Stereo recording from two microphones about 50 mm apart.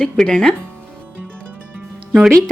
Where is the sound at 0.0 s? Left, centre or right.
Centre.